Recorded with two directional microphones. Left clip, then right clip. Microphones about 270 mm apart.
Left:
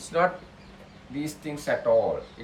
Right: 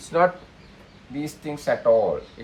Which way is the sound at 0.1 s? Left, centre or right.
Centre.